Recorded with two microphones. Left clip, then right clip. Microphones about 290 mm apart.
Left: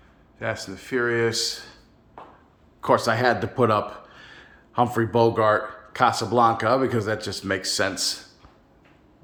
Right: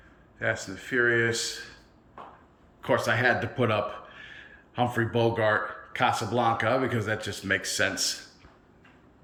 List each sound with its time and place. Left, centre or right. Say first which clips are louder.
0.3 s speech: even; centre
2.8 s speech: left 4 dB; centre